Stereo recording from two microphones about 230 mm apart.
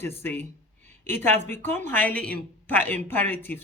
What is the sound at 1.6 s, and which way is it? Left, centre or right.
Speech, centre.